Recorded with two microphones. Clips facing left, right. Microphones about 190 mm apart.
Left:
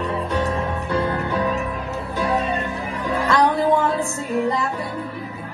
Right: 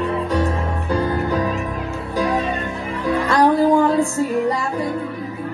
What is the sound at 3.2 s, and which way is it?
Music, 35° right (ahead or behind).